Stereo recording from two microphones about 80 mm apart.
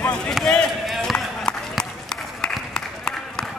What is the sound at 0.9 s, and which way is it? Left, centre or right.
Run, centre.